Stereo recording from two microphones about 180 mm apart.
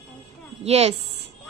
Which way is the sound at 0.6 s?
35° right (ahead or behind).